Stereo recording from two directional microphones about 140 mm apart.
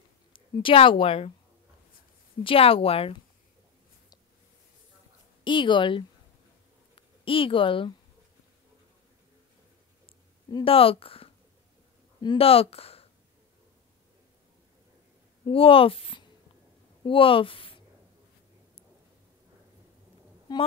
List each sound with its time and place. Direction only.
0.3 s a woman's voice: 35° left (ahead or behind)
2.4 s speech: 40° left (ahead or behind)
5.4 s a woman's voice: 35° left (ahead or behind)
10.0 s a sound: 40° left (ahead or behind)
12.2 s speech: 40° left (ahead or behind)
15.4 s speech: 40° left (ahead or behind)
20.5 s speech: 30° left (ahead or behind)